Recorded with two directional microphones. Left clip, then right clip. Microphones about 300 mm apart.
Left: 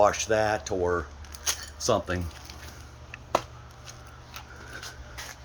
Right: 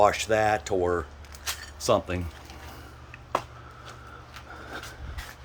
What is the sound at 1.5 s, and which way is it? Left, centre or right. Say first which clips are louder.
Keys jangling: left 3 dB; left.